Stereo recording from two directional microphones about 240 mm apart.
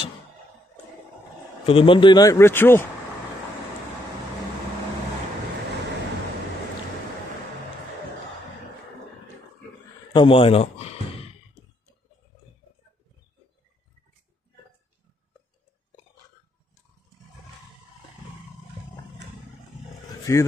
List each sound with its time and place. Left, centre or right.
1.7 s speech: left
10.1 s speech: left
20.3 s speech: centre